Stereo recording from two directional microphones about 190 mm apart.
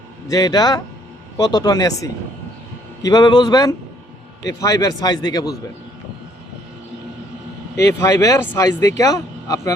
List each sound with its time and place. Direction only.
0.3 s a man's voice: 20° left (ahead or behind)
7.8 s speech: 15° left (ahead or behind)